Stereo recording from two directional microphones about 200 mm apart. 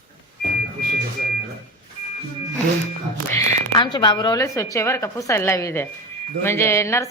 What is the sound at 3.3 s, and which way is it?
A woman's voice, 15° left (ahead or behind).